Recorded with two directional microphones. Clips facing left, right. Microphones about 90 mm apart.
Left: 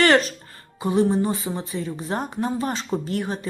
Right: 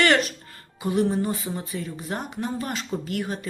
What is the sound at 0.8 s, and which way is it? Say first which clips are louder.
A woman's voice: left 3 dB; 25° left (ahead or behind).